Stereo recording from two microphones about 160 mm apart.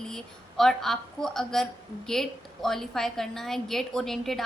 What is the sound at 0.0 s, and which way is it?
A woman's voice, 5° left (ahead or behind).